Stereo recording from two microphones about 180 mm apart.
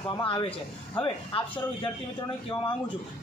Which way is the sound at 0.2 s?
25° left (ahead or behind).